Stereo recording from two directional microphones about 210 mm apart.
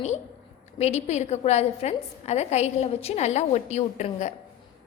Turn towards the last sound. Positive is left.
turn(degrees=35)  # may be behind; listen again after turning